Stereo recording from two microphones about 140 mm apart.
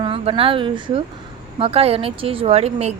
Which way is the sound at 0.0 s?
40° right (ahead or behind).